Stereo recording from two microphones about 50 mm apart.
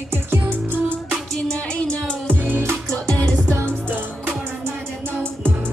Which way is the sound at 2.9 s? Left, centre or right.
Left.